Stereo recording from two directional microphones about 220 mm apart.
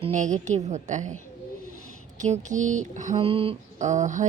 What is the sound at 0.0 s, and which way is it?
A woman's voice, 35° right (ahead or behind).